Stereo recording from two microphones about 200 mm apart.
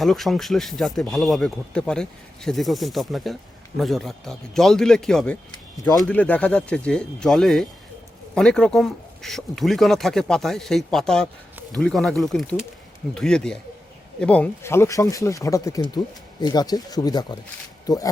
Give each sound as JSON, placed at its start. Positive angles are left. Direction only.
{"t": 0.0, "sound": "speech", "side_deg": 0}